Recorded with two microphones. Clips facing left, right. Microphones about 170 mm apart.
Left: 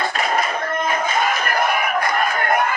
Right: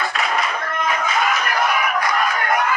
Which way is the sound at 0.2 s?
45° left (ahead or behind).